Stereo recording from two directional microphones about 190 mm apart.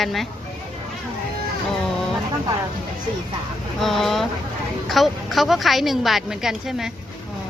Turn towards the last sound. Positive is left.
turn(degrees=0)  # may be behind; listen again after turning